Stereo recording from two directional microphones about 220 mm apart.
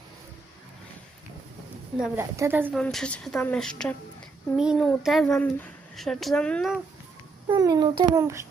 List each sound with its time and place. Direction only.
2.0 s a woman's voice: 10° right (ahead or behind)
2.7 s speech: 5° left (ahead or behind)
7.4 s a child's voice: 20° right (ahead or behind)